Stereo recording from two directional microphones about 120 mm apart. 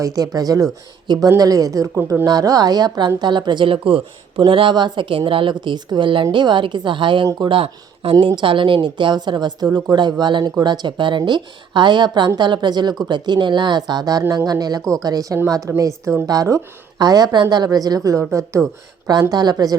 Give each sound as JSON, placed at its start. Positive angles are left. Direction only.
{"t": 0.0, "sound": "a woman's voice", "side_deg": -30}
{"t": 2.0, "sound": "speech", "side_deg": -15}
{"t": 2.2, "sound": "a woman's voice", "side_deg": -30}
{"t": 9.6, "sound": "speech", "side_deg": -15}
{"t": 9.9, "sound": "a woman's voice", "side_deg": -40}